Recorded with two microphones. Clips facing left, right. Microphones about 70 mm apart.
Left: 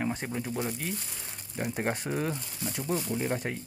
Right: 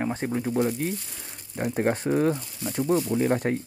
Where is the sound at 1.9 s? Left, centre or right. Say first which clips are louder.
Right 9 dB; right.